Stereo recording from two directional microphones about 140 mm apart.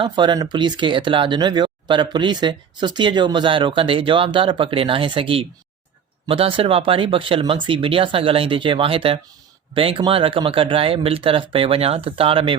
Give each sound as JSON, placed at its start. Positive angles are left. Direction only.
{"t": 0.0, "sound": "speech", "side_deg": -35}